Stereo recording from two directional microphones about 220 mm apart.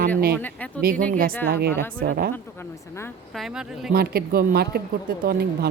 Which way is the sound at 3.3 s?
Centre (ahead or behind).